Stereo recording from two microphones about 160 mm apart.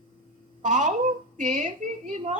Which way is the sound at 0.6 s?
50° right (ahead or behind).